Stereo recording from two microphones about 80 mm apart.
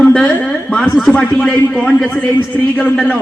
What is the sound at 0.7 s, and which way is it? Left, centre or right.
Speech, centre.